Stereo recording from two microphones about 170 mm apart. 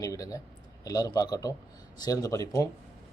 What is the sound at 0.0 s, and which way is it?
Speech, 20° left (ahead or behind).